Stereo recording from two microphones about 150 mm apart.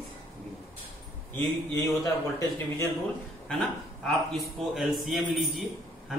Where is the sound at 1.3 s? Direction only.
20° left (ahead or behind).